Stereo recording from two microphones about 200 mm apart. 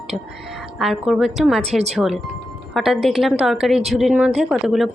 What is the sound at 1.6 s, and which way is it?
Speech, 30° right (ahead or behind).